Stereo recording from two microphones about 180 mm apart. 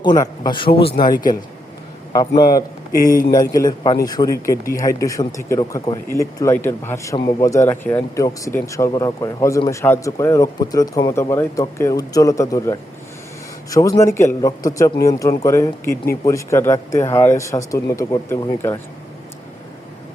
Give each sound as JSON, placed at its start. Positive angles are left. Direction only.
{"t": 0.0, "sound": "a man's voice", "side_deg": 25}
{"t": 2.1, "sound": "a man's voice", "side_deg": 20}